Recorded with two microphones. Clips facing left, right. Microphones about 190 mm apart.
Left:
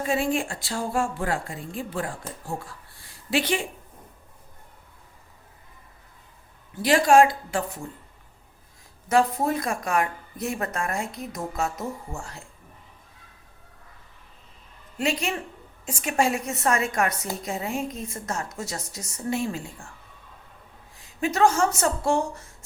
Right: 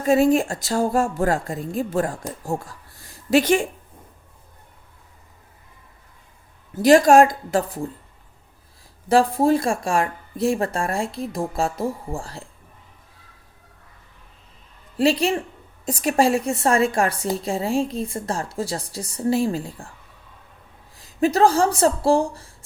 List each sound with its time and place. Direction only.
0.0 s a woman's voice: 40° right (ahead or behind)
6.7 s speech: 45° right (ahead or behind)
9.0 s a woman's voice: 30° right (ahead or behind)
14.9 s a woman's voice: 35° right (ahead or behind)
20.9 s speech: 35° right (ahead or behind)